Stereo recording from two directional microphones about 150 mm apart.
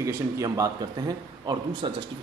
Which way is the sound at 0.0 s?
20° right (ahead or behind).